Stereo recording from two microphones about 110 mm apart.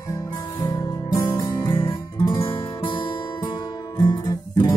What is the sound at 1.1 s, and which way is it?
Music, 25° left (ahead or behind).